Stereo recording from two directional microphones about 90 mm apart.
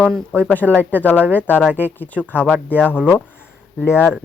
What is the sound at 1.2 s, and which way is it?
Speech, 20° right (ahead or behind).